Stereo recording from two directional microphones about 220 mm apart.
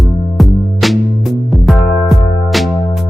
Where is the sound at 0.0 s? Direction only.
Centre (ahead or behind).